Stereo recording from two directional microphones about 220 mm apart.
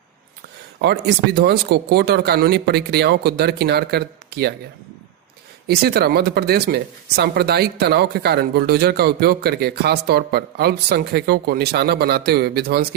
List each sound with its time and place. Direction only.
0.8 s speech: 50° right (ahead or behind)
5.6 s speech: 45° right (ahead or behind)